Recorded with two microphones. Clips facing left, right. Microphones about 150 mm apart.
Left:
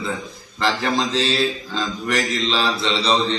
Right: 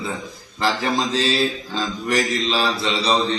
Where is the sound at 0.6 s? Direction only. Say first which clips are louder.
Even; 5° right (ahead or behind).